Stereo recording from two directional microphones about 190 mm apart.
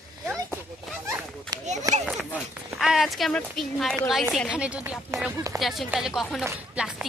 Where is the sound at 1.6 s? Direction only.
40° right (ahead or behind).